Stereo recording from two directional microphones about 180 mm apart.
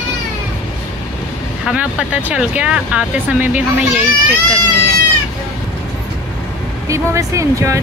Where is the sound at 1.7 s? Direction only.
5° right (ahead or behind).